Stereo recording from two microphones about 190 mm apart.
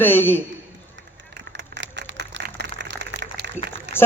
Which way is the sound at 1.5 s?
65° right (ahead or behind).